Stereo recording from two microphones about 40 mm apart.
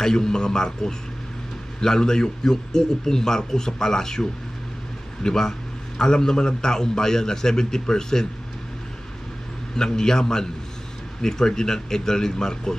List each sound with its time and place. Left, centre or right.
0.0 s a man's voice: centre
9.8 s a man's voice: centre